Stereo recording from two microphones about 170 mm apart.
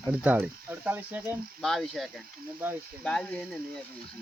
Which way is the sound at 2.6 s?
10° right (ahead or behind).